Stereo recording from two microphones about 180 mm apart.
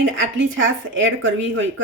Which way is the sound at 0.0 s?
90° right.